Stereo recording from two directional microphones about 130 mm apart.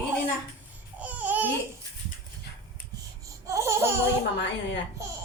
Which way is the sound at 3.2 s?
25° right (ahead or behind).